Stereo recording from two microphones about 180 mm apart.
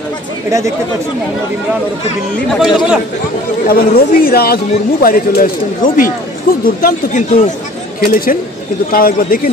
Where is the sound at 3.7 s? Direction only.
55° left (ahead or behind).